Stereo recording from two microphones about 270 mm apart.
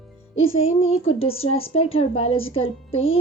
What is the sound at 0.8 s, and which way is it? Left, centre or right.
Speech, left.